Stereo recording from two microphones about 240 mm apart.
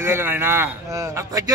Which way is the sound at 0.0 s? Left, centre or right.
Centre.